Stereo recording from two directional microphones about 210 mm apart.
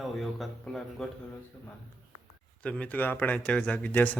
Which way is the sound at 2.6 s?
5° left (ahead or behind).